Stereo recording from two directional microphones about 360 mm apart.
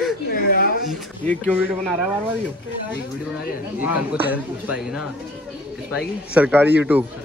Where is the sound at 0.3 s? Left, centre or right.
Left.